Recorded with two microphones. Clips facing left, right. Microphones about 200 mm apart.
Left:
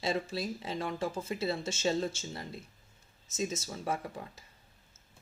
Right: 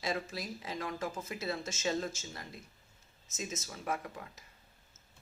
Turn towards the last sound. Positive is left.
turn(degrees=30)  # may be behind; listen again after turning